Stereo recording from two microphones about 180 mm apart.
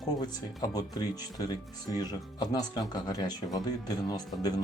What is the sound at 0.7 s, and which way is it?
Speech, 20° left (ahead or behind).